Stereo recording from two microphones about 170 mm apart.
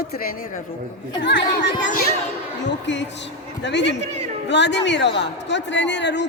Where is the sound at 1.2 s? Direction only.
90° left.